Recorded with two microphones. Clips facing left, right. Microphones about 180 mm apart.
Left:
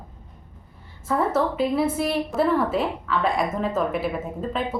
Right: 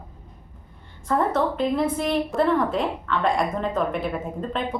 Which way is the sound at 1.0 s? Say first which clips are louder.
Even; 5° left (ahead or behind).